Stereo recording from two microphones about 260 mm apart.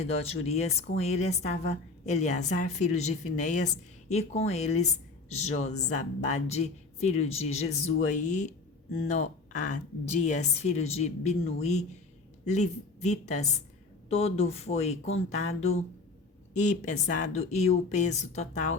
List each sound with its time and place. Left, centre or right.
0.0 s speech: left